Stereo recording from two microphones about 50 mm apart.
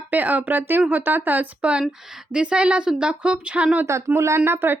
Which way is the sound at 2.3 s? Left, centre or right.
Centre.